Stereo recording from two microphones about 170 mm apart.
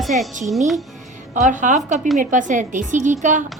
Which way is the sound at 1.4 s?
45° right (ahead or behind).